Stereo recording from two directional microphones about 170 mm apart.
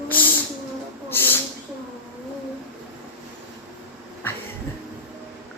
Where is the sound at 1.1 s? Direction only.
10° left (ahead or behind).